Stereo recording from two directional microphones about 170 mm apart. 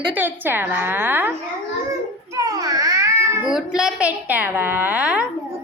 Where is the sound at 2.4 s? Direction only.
20° right (ahead or behind).